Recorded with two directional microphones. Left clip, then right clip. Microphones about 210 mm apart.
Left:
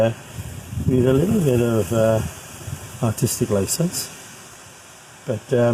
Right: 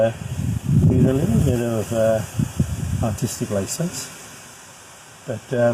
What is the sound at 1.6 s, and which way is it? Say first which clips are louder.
Speech: left 1 dB; 45° left (ahead or behind).